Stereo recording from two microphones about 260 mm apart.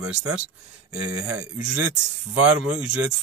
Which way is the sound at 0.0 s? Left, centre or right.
Centre.